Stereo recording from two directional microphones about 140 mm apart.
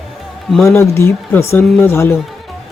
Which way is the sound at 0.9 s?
20° left (ahead or behind).